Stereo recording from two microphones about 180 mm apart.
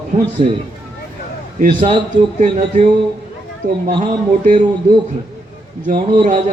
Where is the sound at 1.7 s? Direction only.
30° right (ahead or behind).